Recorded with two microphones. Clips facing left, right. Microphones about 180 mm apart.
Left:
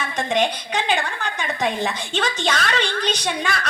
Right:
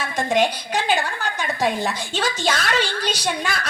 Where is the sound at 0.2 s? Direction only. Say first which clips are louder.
Right 2 dB; 5° right (ahead or behind).